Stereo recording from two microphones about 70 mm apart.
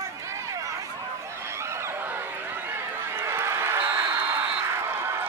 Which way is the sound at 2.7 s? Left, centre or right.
Right.